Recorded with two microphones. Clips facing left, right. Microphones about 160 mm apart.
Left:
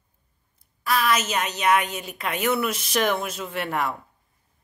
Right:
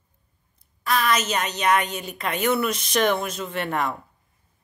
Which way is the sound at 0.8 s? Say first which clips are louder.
Even; 5° left (ahead or behind).